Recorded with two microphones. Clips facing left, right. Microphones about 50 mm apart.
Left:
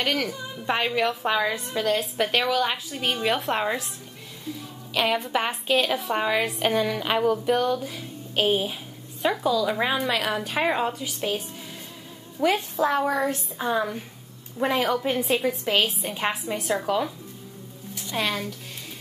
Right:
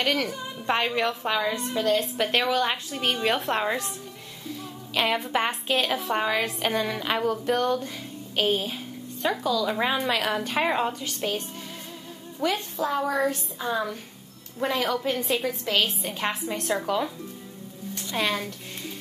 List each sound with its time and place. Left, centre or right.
0.0 s a woman's voice: centre
1.7 s a woman's voice: centre
2.0 s a woman's voice: centre
4.9 s a woman's voice: centre
12.7 s a woman's voice: left
13.1 s a woman's voice: centre